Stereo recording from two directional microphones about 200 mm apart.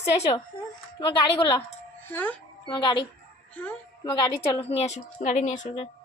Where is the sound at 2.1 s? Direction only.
10° left (ahead or behind).